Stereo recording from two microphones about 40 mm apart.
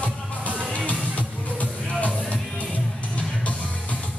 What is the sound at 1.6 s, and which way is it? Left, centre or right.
Music, left.